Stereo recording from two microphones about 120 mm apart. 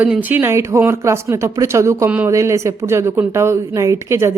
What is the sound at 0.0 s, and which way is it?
Speech, 15° right (ahead or behind).